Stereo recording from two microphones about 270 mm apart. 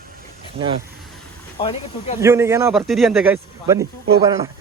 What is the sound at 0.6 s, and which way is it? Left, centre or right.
Speech, right.